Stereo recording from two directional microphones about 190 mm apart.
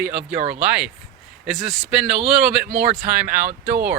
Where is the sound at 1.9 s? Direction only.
5° right (ahead or behind).